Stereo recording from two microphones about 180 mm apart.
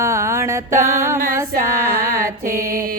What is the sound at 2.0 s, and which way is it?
Mantra, 15° right (ahead or behind).